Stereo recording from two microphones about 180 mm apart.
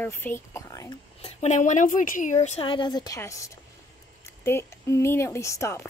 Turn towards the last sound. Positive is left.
turn(degrees=15)  # may be behind; listen again after turning